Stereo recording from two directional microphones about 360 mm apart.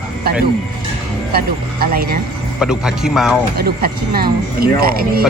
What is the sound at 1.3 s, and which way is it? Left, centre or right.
Speech, right.